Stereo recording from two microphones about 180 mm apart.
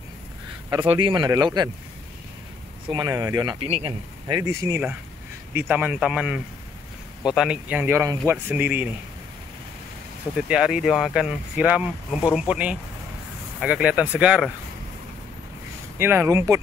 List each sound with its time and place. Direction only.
0.7 s speech: 25° right (ahead or behind)
2.9 s speech: 20° right (ahead or behind)
3.6 s a man's voice: 35° right (ahead or behind)
4.3 s speech: 15° right (ahead or behind)
10.3 s speech: 5° right (ahead or behind)
16.0 s speech: 10° right (ahead or behind)